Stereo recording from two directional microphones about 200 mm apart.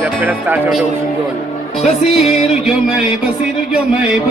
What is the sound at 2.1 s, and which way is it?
Music, centre (ahead or behind).